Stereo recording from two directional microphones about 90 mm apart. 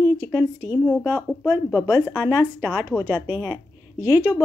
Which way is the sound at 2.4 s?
20° right (ahead or behind).